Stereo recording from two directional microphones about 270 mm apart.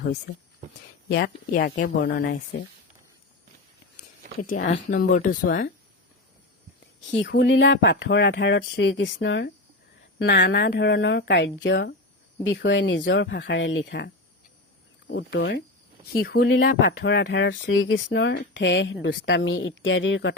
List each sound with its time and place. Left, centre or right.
1.0 s speech: left
4.4 s speech: left
6.7 s speech: left
15.1 s speech: left